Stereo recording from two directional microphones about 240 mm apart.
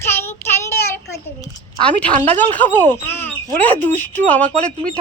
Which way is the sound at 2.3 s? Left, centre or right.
Centre.